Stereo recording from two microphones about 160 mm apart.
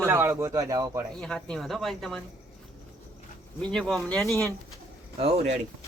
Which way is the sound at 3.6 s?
5° left (ahead or behind).